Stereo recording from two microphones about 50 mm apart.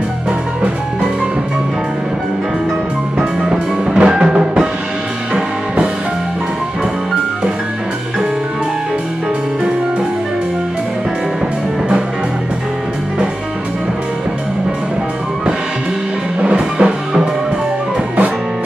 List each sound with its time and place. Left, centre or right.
3.2 s music: centre
16.4 s music: right